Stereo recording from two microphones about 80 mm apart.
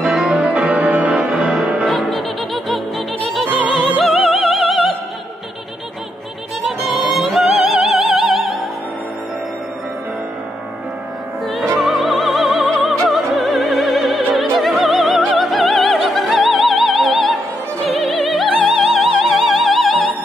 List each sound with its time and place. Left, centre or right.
0.0 s music: centre
0.7 s music: centre
1.2 s music: centre
3.3 s opera: centre
6.6 s opera: centre
11.4 s music: centre
11.8 s opera: centre